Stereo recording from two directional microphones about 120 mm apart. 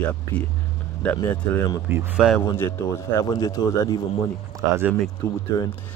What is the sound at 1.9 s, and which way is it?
Speech, 20° right (ahead or behind).